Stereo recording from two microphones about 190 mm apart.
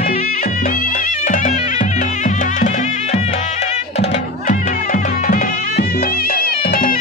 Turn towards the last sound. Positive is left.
turn(degrees=50)  # may be behind; listen again after turning